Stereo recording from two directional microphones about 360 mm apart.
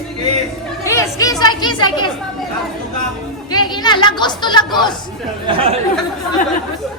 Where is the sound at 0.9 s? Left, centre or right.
Centre.